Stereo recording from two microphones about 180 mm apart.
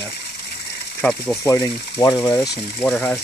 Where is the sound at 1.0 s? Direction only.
5° left (ahead or behind).